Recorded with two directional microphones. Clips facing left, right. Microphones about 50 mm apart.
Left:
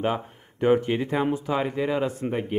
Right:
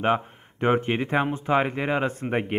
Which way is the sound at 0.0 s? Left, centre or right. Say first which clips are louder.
Right 3 dB; right.